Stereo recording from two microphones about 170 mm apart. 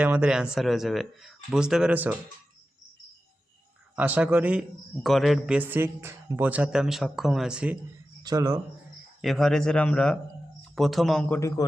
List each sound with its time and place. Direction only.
0.0 s a man's voice: 10° right (ahead or behind)
3.9 s a man's voice: 10° right (ahead or behind)
8.2 s speech: 20° right (ahead or behind)
9.2 s speech: centre (ahead or behind)
11.3 s a man's voice: 20° left (ahead or behind)